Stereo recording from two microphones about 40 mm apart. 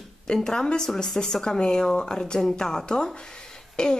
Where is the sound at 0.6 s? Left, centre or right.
Centre.